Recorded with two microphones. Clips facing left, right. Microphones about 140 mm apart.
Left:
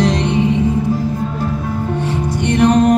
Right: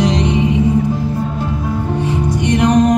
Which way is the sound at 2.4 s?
15° right (ahead or behind).